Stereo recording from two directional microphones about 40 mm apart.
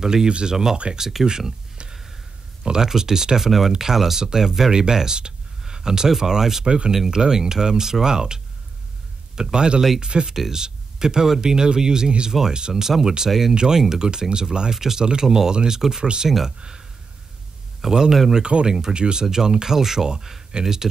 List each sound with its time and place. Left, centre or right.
0.0 s speech: centre
6.6 s speech: right
10.3 s speech: centre
16.3 s speech: centre
16.5 s speech: right
17.8 s speech: centre